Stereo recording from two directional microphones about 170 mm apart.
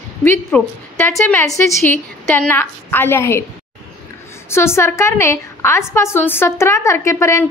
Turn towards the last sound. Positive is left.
turn(degrees=15)  # may be behind; listen again after turning